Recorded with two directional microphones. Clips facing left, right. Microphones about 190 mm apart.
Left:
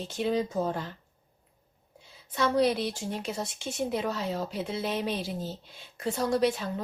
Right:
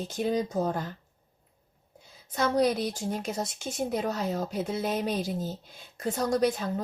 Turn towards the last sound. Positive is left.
turn(degrees=-45)  # may be behind; listen again after turning